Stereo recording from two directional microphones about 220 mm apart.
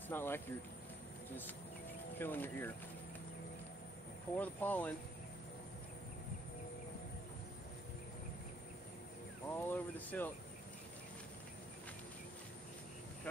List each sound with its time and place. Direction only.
0.1 s speech: 10° left (ahead or behind)
2.1 s speech: 10° left (ahead or behind)
4.4 s speech: 5° left (ahead or behind)
9.7 s speech: 10° left (ahead or behind)